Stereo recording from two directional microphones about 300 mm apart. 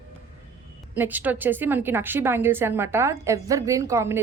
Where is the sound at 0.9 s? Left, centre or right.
Centre.